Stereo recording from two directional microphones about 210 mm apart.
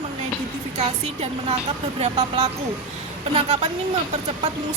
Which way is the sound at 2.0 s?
30° right (ahead or behind).